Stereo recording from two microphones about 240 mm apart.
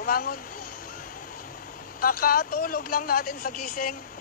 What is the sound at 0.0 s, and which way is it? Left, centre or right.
Speech, left.